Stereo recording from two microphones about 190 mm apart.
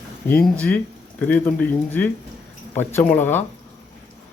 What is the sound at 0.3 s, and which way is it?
Speech, 10° left (ahead or behind).